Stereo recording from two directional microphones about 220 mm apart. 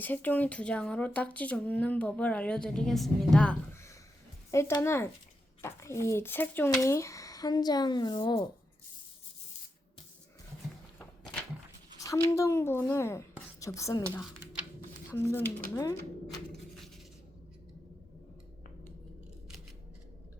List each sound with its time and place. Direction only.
0.0 s speech: 10° left (ahead or behind)
11.9 s speech: 15° left (ahead or behind)
15.1 s speech: 10° left (ahead or behind)
16.5 s a sound: centre (ahead or behind)